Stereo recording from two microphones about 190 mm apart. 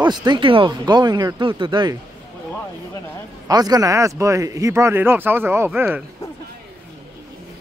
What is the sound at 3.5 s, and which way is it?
Speech, 20° right (ahead or behind).